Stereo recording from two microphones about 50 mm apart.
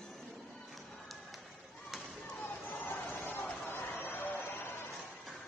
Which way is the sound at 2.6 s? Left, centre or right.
Left.